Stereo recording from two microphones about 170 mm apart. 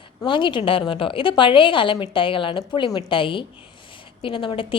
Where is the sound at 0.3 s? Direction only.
30° left (ahead or behind).